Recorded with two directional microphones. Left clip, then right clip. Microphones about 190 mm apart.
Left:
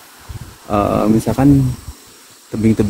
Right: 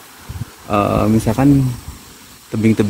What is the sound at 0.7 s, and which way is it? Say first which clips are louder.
Speech: left 1 dB; 10° left (ahead or behind).